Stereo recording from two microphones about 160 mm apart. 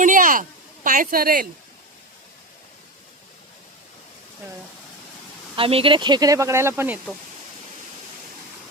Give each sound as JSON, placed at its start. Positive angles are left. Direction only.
{"t": 0.0, "sound": "a sound", "side_deg": -55}
{"t": 0.9, "sound": "a woman's voice", "side_deg": -60}
{"t": 5.5, "sound": "speech", "side_deg": -35}